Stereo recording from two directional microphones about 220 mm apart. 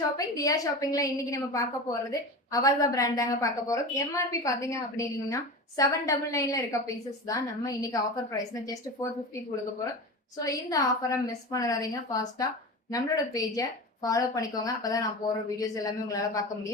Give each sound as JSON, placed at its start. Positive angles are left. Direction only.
{"t": 0.2, "sound": "a woman's voice", "side_deg": 15}
{"t": 10.3, "sound": "a woman's voice", "side_deg": 15}